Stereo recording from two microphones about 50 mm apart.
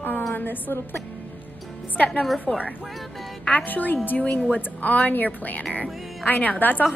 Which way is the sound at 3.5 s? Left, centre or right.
Left.